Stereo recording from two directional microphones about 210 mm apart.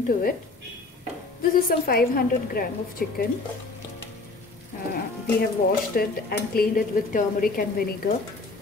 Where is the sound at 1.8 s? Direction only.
45° left (ahead or behind).